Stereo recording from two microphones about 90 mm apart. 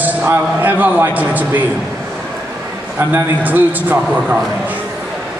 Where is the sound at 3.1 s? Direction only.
20° right (ahead or behind).